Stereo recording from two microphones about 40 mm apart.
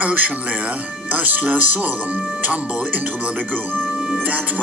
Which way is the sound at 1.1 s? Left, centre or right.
Right.